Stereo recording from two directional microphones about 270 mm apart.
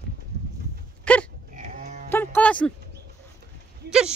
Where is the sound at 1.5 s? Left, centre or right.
Right.